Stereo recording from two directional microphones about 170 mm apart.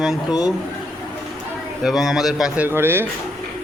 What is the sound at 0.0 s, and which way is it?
Speech, centre (ahead or behind).